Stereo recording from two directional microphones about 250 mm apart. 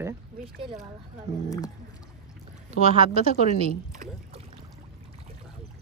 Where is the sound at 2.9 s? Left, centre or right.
Right.